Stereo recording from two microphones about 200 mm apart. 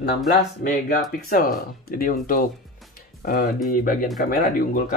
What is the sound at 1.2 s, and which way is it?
Speech, 45° left (ahead or behind).